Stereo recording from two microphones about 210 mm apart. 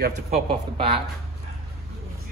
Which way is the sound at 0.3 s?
25° right (ahead or behind).